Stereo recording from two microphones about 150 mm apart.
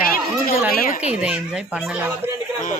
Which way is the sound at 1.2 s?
5° right (ahead or behind).